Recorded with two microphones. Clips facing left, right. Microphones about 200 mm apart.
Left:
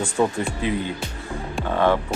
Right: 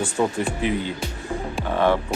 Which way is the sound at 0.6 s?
20° right (ahead or behind).